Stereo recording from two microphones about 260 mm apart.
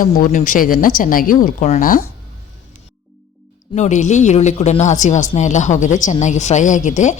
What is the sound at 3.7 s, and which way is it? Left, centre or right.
Speech, left.